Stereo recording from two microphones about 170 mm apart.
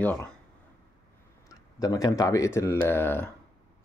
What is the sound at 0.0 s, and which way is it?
Speech, 10° left (ahead or behind).